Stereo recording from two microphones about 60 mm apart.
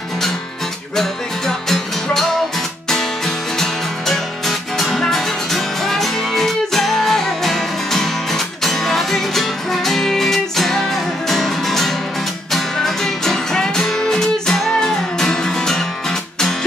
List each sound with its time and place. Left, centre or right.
4.1 s music: centre